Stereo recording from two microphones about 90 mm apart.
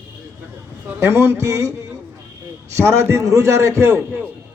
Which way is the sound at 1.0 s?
30° right (ahead or behind).